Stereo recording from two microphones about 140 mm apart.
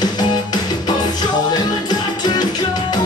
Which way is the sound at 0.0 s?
30° left (ahead or behind).